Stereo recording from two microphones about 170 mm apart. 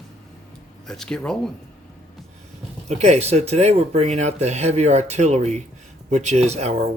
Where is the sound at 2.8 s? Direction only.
40° right (ahead or behind).